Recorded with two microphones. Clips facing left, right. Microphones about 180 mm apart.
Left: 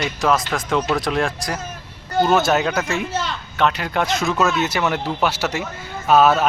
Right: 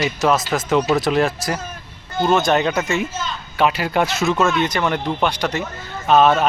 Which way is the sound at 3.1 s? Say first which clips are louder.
Left 3 dB; 70° left (ahead or behind).